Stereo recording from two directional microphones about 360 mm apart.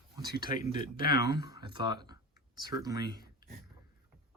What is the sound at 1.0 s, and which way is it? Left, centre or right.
Speech, left.